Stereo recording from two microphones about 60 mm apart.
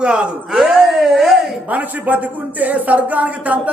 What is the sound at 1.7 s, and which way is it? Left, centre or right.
Speech, right.